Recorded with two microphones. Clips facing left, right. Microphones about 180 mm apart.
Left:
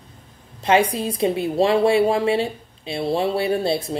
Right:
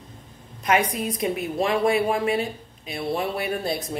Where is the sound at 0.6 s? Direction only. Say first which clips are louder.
Left 4 dB; 30° left (ahead or behind).